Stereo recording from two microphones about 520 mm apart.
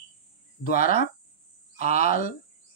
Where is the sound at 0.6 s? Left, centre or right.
Centre.